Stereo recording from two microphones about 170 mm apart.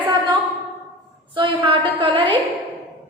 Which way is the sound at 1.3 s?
30° right (ahead or behind).